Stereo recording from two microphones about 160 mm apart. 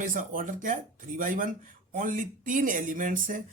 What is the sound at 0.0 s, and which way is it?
Speech, 55° right (ahead or behind).